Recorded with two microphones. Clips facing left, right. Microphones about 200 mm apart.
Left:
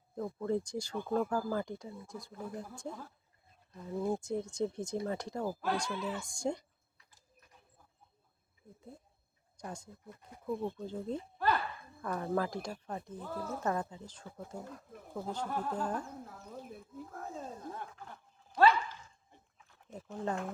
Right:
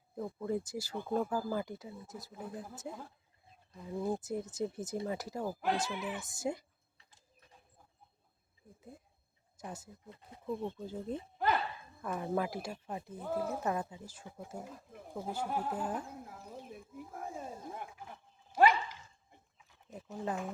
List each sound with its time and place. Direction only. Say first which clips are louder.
0.2 s speech: left 2 dB; 10° right (ahead or behind)
5.5 s speech: right 1 dB; 20° right (ahead or behind)
6.2 s speech: left 1 dB; 5° right (ahead or behind)
7.0 s a sound: even; 25° right (ahead or behind)
9.6 s speech: left 1 dB; 5° right (ahead or behind)
10.1 s speech: left 1 dB; 25° right (ahead or behind)
10.4 s speech: left 2 dB; 10° left (ahead or behind)
10.8 s speech: left 1 dB; 5° right (ahead or behind)
11.3 s a sound: even; 20° right (ahead or behind)
12.0 s speech: left 1 dB; 10° right (ahead or behind)
19.5 s a sound: left 1 dB; 5° right (ahead or behind)